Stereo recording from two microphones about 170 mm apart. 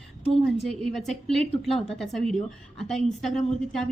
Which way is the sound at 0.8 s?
Centre (ahead or behind).